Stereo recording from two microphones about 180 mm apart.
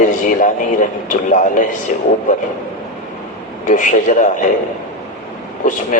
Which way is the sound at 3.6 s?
45° left (ahead or behind).